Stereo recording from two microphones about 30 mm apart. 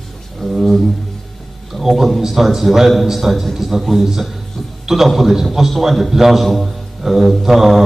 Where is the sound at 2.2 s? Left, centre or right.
Centre.